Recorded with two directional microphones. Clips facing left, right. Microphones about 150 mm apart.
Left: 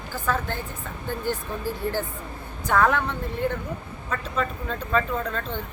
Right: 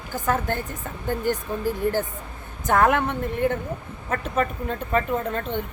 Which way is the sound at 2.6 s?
45° right (ahead or behind).